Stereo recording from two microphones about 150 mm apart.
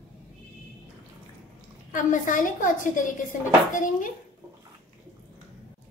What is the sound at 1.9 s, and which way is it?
A woman's voice, 60° left (ahead or behind).